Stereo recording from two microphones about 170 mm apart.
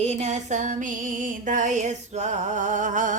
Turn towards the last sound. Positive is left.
turn(degrees=-50)  # may be behind; listen again after turning